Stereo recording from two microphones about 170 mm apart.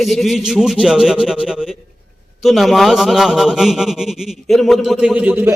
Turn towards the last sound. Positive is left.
turn(degrees=-10)  # may be behind; listen again after turning